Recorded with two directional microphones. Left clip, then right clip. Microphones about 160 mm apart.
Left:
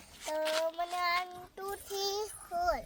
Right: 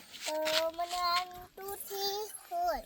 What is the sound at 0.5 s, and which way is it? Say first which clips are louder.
Child singing: right 1 dB; 25° left (ahead or behind).